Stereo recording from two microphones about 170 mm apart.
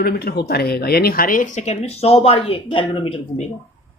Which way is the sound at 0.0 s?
70° left (ahead or behind).